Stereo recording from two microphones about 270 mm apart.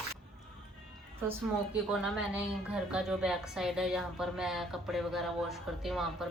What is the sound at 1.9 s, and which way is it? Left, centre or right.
A woman's voice, centre.